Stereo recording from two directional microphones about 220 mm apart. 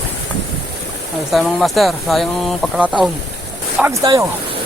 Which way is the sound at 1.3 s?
Centre (ahead or behind).